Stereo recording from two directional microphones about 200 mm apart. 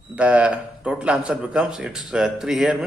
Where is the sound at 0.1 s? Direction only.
5° right (ahead or behind).